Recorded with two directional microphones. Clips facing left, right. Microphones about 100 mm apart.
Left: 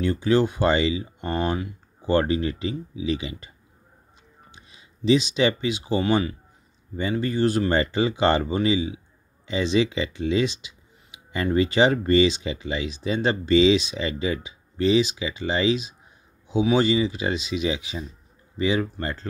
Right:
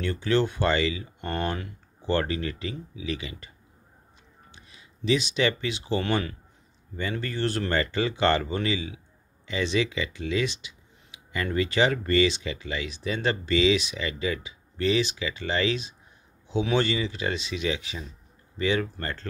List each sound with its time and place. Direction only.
0.0 s speech: 15° left (ahead or behind)
4.6 s speech: 20° left (ahead or behind)